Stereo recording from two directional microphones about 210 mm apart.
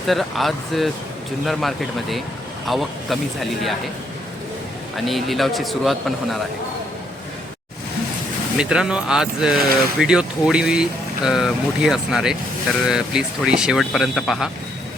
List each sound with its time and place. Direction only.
0.1 s speech: centre (ahead or behind)
4.9 s speech: centre (ahead or behind)
8.5 s speech: 5° right (ahead or behind)